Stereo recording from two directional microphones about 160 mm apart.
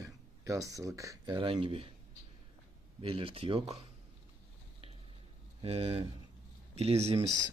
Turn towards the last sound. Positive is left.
turn(degrees=-40)  # may be behind; listen again after turning